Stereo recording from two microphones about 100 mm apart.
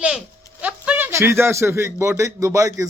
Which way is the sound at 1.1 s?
25° right (ahead or behind).